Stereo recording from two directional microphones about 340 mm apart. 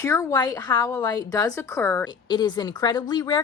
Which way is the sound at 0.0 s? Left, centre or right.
Centre.